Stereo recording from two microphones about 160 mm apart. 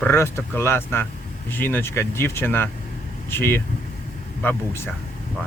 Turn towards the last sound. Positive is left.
turn(degrees=15)  # may be behind; listen again after turning